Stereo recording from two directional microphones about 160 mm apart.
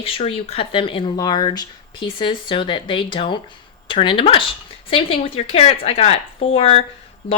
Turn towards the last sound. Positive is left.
turn(degrees=35)  # may be behind; listen again after turning